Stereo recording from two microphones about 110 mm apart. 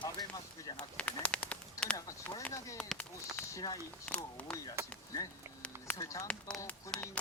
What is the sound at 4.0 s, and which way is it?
Speech, 10° left (ahead or behind).